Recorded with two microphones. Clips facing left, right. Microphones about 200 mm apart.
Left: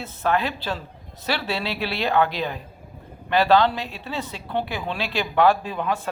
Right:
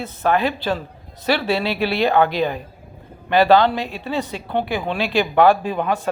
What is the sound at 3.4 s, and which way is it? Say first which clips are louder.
Speech: right 4 dB; 60° right (ahead or behind).